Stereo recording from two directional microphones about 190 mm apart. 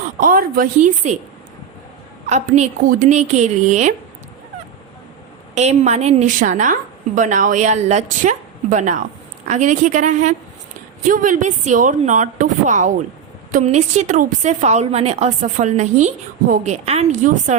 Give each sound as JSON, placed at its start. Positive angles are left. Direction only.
{"t": 0.2, "sound": "a woman's voice", "side_deg": -45}
{"t": 2.2, "sound": "a woman's voice", "side_deg": -35}
{"t": 5.5, "sound": "a woman's voice", "side_deg": -35}